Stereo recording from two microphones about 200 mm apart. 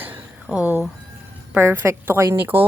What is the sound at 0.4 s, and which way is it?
A woman's voice, 5° right (ahead or behind).